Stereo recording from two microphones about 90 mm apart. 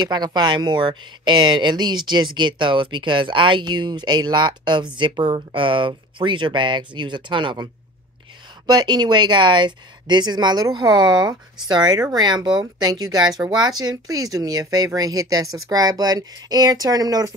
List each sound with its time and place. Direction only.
0.0 s speech: 55° right (ahead or behind)